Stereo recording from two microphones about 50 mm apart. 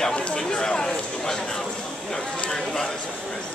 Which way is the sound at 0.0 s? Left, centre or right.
Centre.